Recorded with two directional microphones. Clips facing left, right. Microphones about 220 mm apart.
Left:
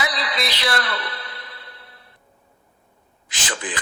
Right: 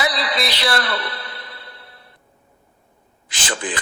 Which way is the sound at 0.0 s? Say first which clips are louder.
Right 3 dB; 35° right (ahead or behind).